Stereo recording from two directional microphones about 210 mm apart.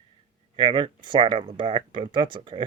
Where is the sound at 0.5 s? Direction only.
25° right (ahead or behind).